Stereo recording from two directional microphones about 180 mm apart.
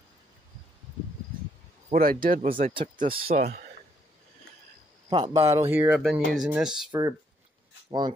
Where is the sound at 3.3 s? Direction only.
60° right (ahead or behind).